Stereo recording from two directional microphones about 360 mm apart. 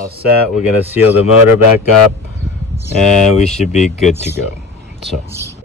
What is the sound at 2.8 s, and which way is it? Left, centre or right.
Speech, centre.